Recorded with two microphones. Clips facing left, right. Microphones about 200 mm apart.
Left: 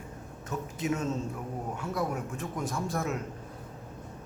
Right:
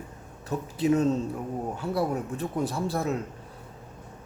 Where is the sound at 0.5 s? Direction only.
35° right (ahead or behind).